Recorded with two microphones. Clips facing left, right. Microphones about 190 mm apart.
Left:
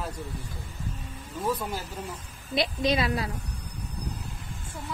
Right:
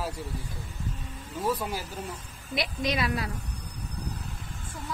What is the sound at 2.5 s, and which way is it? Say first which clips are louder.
Speech: left 4 dB; 25° left (ahead or behind).